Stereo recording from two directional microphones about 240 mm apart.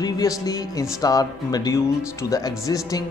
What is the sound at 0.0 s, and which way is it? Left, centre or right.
Speech, centre.